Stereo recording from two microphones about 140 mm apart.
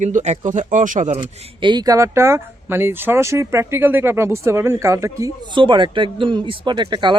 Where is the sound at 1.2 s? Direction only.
35° right (ahead or behind).